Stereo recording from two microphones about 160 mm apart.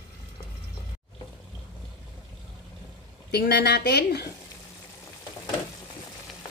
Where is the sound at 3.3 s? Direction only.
85° left.